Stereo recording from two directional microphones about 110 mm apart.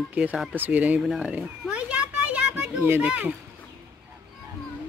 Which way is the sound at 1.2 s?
15° right (ahead or behind).